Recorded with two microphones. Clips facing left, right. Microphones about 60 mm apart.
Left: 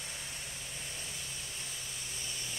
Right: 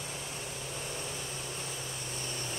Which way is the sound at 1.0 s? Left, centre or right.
Right.